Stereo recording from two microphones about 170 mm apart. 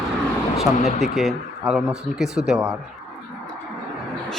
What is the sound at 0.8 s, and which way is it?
Speech, 40° left (ahead or behind).